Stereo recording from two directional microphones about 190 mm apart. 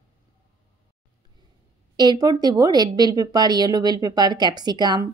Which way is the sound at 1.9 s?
20° right (ahead or behind).